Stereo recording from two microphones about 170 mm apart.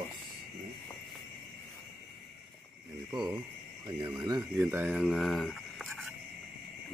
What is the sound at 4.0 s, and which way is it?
Speech, 10° right (ahead or behind).